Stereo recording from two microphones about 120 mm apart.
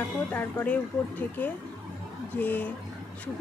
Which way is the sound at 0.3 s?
15° left (ahead or behind).